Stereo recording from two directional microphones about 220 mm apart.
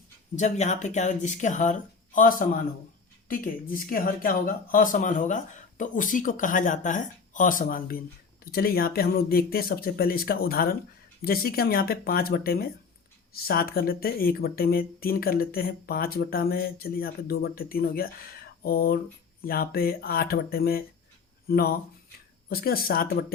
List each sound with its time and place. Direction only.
0.3 s speech: 30° left (ahead or behind)